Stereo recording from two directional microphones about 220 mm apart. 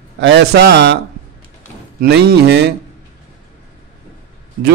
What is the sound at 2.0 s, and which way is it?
Speech, 45° right (ahead or behind).